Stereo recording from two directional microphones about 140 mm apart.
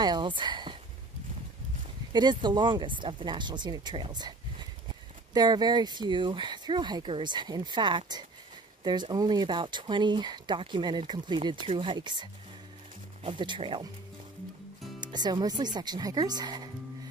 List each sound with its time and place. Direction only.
0.0 s speech: 35° right (ahead or behind)
2.1 s speech: 30° right (ahead or behind)
15.0 s speech: 30° right (ahead or behind)